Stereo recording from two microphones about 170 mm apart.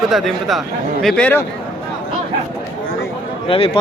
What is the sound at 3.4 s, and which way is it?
Speech, 35° left (ahead or behind).